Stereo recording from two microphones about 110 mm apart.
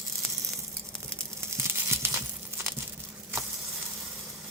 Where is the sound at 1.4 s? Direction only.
25° right (ahead or behind).